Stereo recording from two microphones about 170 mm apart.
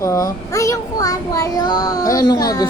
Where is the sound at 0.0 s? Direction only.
20° left (ahead or behind).